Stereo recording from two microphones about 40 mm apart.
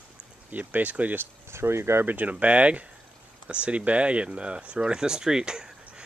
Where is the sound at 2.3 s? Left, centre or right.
Right; by 6.0 s centre.